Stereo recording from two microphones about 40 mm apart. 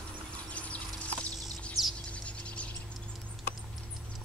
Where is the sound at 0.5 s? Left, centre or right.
Left.